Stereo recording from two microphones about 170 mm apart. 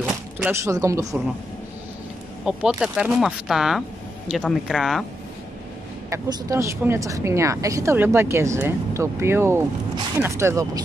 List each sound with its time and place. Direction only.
0.0 s a sound: 5° right (ahead or behind)
0.5 s speech: 15° right (ahead or behind)
2.4 s speech: 5° right (ahead or behind)
6.0 s speech: 15° right (ahead or behind)